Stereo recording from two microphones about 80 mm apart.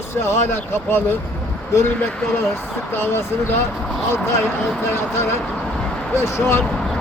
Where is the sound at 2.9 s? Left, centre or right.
Left.